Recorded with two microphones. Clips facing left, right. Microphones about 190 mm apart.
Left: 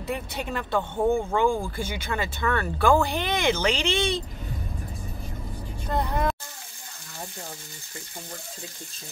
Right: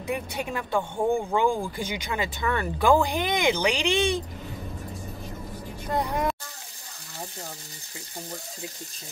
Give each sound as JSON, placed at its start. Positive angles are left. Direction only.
{"t": 0.0, "sound": "speech", "side_deg": -15}
{"t": 5.9, "sound": "speech", "side_deg": -10}